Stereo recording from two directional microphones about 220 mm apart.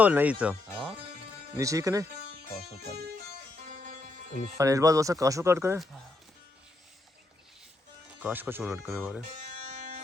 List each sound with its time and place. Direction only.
0.0 s speech: 5° right (ahead or behind)
1.5 s speech: 15° right (ahead or behind)
4.5 s speech: 15° right (ahead or behind)
8.2 s speech: 10° right (ahead or behind)